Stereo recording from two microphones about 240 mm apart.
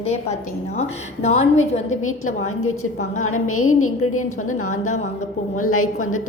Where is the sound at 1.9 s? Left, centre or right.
Left.